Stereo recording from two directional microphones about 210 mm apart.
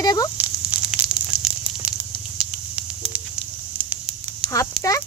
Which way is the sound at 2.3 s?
5° right (ahead or behind).